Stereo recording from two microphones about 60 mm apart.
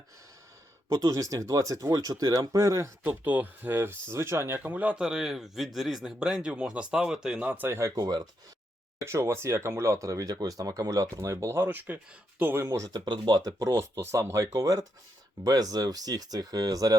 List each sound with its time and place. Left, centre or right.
0.9 s speech: right
3.0 s speech: right
3.8 s speech: right
4.7 s a man's voice: right
7.7 s speech: right
7.9 s speech: right
9.0 s speech: right
11.3 s speech: right
12.6 s speech: right
14.0 s speech: right